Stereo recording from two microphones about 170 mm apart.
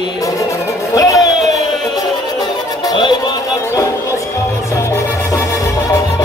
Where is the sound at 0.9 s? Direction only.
20° left (ahead or behind).